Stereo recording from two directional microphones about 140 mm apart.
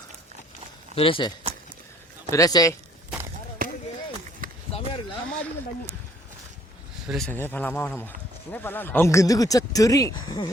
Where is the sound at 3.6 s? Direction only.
90° right.